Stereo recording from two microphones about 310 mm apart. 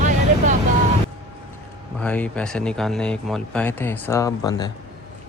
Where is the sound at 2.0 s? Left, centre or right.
Centre.